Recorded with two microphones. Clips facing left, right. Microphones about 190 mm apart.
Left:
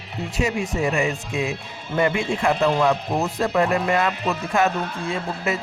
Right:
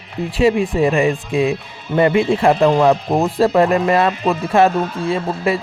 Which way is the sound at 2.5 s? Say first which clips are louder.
Right 5 dB; 55° right (ahead or behind).